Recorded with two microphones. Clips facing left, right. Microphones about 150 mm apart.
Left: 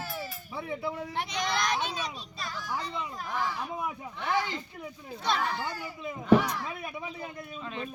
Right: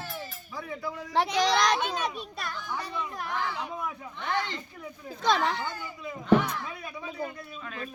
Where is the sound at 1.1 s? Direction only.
90° right.